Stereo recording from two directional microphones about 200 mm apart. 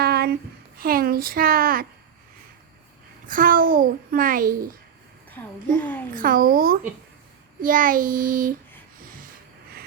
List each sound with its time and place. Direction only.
0.0 s a sound: 50° right (ahead or behind)
0.8 s a child's voice: 50° right (ahead or behind)
3.2 s a child's voice: 45° right (ahead or behind)
5.3 s a child's voice: 10° left (ahead or behind)
6.1 s a child's voice: 45° right (ahead or behind)